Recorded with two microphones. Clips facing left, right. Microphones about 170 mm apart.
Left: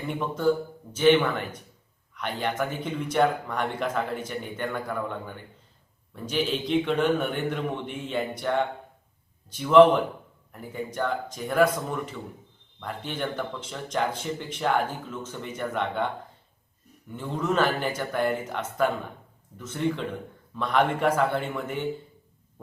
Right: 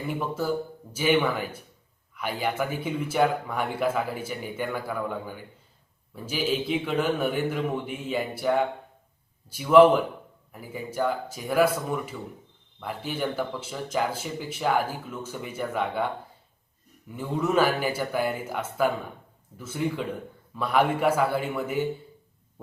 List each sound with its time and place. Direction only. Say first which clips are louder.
0.1 s a man's voice: left 4 dB; 5° right (ahead or behind)
17.1 s speech: right 1 dB; 10° right (ahead or behind)